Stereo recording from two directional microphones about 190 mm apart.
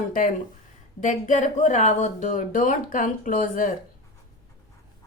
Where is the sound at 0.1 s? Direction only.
45° left (ahead or behind).